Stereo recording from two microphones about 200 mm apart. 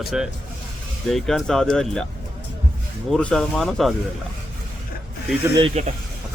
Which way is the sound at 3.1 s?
5° left (ahead or behind).